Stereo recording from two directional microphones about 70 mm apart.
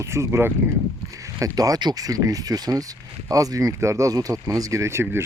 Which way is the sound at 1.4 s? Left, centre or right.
Right.